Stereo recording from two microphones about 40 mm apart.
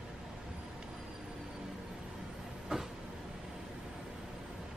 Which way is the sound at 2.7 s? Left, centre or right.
Centre.